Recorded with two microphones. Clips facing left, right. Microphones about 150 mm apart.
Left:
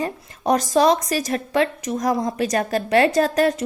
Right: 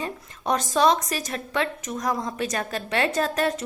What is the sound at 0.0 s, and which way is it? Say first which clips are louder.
A woman's voice: left 6 dB; 40° left (ahead or behind).